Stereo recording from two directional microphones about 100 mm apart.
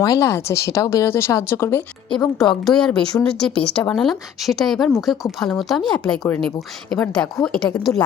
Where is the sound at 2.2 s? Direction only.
40° left (ahead or behind).